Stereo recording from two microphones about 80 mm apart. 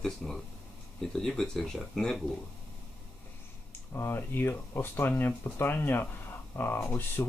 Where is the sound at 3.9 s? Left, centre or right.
Left.